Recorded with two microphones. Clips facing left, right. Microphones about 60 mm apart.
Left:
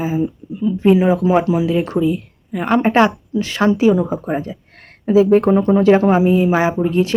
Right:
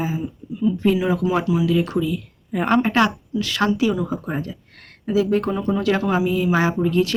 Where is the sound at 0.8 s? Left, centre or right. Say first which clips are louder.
Left 8 dB; left.